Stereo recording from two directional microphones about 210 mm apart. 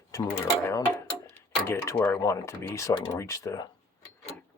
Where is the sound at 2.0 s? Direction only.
15° left (ahead or behind).